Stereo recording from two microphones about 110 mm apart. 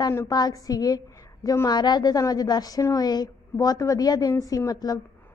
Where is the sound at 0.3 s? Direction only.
35° left (ahead or behind).